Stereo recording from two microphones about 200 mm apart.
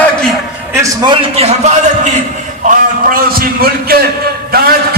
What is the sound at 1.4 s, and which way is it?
Speech, 30° right (ahead or behind).